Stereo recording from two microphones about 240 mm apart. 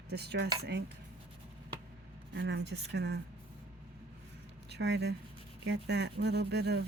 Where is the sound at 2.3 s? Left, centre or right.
Right.